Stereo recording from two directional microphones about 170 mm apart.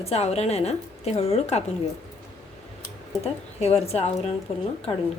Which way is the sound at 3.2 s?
40° left (ahead or behind).